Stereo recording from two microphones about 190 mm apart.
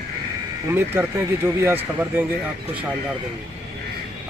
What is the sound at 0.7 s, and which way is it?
Speech, 10° right (ahead or behind).